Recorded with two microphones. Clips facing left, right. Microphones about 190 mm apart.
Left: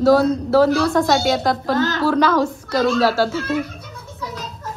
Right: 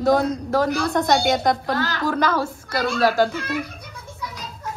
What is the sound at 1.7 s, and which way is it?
Speech, 20° left (ahead or behind).